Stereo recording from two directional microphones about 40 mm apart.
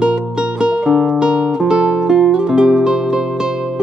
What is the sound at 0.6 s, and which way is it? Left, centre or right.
Music, right.